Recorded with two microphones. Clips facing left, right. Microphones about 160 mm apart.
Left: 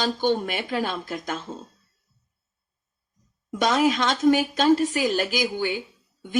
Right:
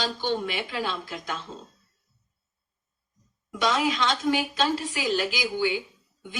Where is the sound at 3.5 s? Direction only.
45° left (ahead or behind).